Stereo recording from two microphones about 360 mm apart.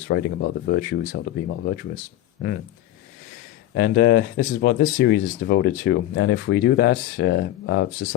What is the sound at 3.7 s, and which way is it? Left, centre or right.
Speech, left.